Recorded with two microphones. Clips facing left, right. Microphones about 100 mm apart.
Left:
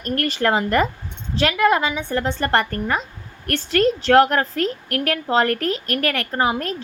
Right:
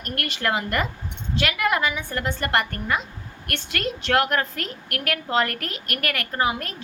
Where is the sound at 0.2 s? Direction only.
35° left (ahead or behind).